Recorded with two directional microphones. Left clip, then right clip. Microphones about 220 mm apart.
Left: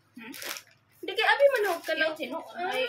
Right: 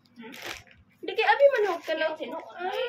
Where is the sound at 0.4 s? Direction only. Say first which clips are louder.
Even; 10° right (ahead or behind).